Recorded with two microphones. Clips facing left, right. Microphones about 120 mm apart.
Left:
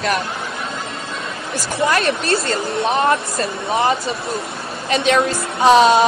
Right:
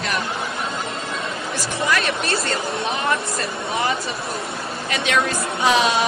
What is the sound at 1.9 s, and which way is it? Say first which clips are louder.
A woman's voice: left 4 dB; 30° left (ahead or behind).